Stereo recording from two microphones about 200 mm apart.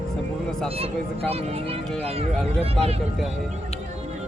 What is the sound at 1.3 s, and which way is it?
Speech, 30° right (ahead or behind).